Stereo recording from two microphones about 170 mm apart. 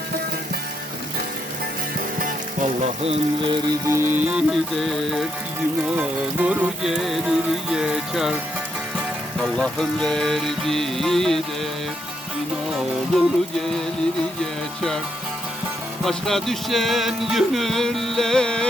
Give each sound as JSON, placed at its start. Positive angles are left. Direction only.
{"t": 2.1, "sound": "music", "side_deg": -50}
{"t": 9.4, "sound": "music", "side_deg": 0}
{"t": 12.7, "sound": "music", "side_deg": 0}
{"t": 16.0, "sound": "music", "side_deg": 0}